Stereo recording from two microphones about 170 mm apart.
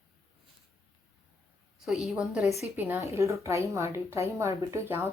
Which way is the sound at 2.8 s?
10° right (ahead or behind).